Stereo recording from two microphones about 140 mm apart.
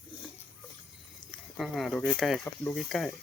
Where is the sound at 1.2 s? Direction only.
25° right (ahead or behind).